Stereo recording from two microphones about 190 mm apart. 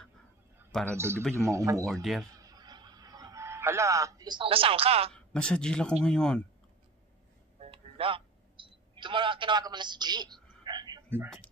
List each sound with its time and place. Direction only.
0.7 s a man's voice: 5° left (ahead or behind)
0.9 s a man's voice: 15° right (ahead or behind)
1.9 s speech: centre (ahead or behind)
2.4 s a sound: 20° right (ahead or behind)
5.1 s speech: 5° left (ahead or behind)
7.5 s music: 30° right (ahead or behind)